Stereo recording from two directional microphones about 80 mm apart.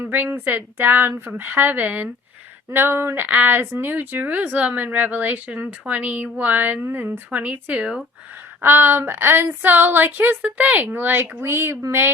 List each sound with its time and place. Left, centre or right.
0.0 s speech: right
8.6 s speech: right